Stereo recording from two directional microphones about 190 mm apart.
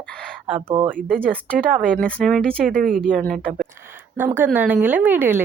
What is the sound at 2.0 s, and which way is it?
A man's voice, 5° left (ahead or behind).